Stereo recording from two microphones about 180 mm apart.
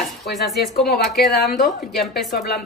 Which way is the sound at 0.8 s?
60° left (ahead or behind).